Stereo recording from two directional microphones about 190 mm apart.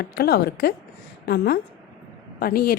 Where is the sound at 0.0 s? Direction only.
55° left (ahead or behind).